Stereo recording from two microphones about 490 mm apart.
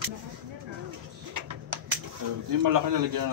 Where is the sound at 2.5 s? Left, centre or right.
Right.